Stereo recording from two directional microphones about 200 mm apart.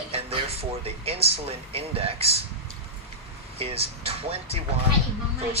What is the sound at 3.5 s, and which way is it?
Speech, 30° right (ahead or behind).